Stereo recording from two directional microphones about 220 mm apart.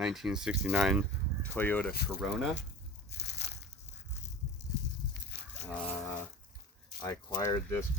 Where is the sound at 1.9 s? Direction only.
45° left (ahead or behind).